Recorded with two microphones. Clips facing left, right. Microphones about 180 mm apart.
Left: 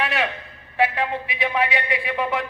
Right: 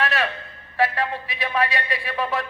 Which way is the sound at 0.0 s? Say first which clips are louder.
Even; 15° left (ahead or behind).